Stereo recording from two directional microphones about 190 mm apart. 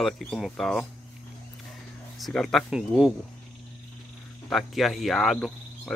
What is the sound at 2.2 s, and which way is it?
Speech, centre (ahead or behind).